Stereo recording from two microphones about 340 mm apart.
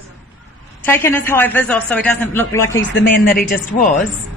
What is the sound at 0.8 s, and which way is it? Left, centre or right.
A man's voice, centre.